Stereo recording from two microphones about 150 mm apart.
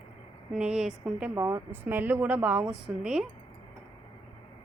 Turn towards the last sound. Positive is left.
turn(degrees=-5)  # may be behind; listen again after turning